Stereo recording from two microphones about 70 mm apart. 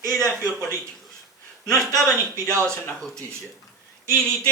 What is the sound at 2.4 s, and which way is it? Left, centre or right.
Speech, right.